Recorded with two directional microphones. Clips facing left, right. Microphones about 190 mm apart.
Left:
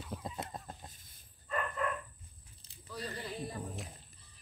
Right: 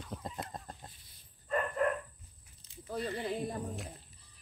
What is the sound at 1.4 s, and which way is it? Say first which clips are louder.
Bow-wow: right 5 dB; 45° right (ahead or behind).